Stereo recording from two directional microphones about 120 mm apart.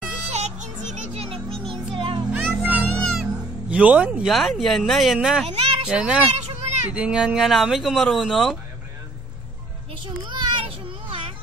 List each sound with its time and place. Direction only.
0.3 s children playing: 75° right (ahead or behind)
1.1 s music: 55° right (ahead or behind)
2.3 s music: 15° right (ahead or behind)
3.1 s cat: 5° right (ahead or behind)
4.3 s speech: centre (ahead or behind)
5.5 s a sound: 55° right (ahead or behind)
5.9 s speech: 10° right (ahead or behind)
6.3 s a sound: 60° right (ahead or behind)
6.9 s speech: 10° right (ahead or behind)
10.0 s children playing: 40° right (ahead or behind)